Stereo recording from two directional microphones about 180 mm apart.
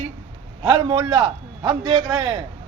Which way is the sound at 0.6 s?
25° right (ahead or behind).